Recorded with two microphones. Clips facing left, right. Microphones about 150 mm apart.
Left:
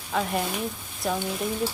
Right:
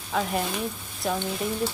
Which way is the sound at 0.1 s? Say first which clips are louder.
Even; centre (ahead or behind).